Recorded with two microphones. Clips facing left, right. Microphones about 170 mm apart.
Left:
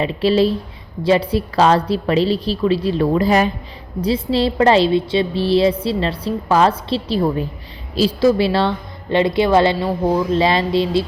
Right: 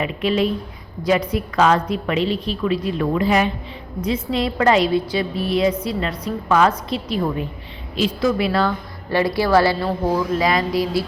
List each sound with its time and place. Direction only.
0.0 s a woman's voice: 30° left (ahead or behind)